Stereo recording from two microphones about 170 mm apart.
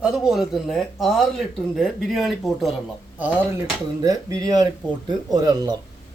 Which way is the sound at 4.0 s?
20° right (ahead or behind).